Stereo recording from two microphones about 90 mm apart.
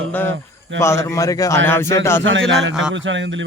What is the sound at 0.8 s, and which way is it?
Speech, 30° left (ahead or behind).